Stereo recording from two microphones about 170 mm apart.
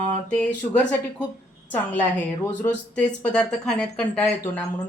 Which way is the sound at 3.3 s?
5° left (ahead or behind).